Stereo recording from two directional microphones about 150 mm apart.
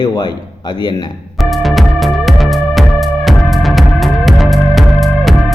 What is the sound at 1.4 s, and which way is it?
Music, centre (ahead or behind).